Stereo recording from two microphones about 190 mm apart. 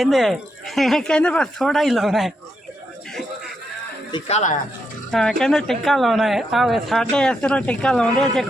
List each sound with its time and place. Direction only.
0.0 s a woman's voice: centre (ahead or behind)
4.1 s speech: 35° left (ahead or behind)
5.1 s a woman's voice: centre (ahead or behind)